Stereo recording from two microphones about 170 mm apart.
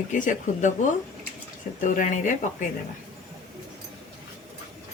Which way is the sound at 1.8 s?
50° left (ahead or behind).